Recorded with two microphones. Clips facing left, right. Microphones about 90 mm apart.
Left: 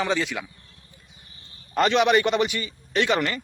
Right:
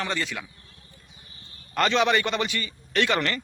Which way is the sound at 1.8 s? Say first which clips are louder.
Left 3 dB; 15° left (ahead or behind).